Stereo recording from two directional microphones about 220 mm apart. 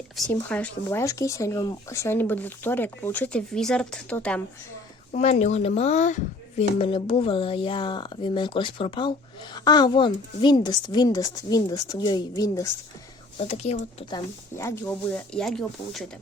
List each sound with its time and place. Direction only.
0.3 s speech: 5° left (ahead or behind)
5.1 s speech: 30° left (ahead or behind)
13.4 s speech: 30° left (ahead or behind)
14.5 s speech: 15° left (ahead or behind)